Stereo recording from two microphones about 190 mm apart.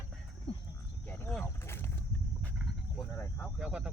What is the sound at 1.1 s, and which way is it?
Speech, 10° left (ahead or behind).